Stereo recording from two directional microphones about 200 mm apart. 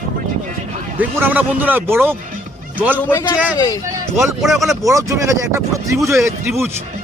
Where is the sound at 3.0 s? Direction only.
10° left (ahead or behind).